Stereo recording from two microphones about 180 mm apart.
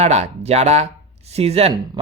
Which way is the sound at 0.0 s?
35° right (ahead or behind).